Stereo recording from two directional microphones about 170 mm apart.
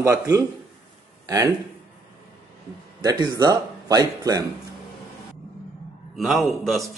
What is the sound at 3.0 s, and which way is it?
Speech, 25° right (ahead or behind).